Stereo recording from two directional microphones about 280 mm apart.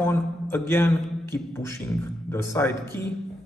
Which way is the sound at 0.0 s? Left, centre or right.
Centre.